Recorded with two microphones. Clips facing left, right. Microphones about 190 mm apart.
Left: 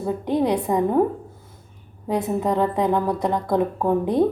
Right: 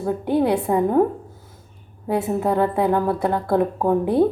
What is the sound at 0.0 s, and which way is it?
A woman's voice, 5° right (ahead or behind).